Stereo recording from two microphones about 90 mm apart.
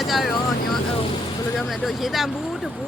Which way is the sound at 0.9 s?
90° left.